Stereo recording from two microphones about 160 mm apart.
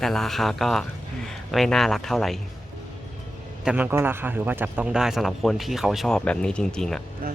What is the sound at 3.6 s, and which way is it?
A man's voice, 10° right (ahead or behind).